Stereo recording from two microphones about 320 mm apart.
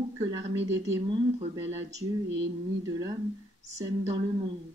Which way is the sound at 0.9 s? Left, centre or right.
Centre.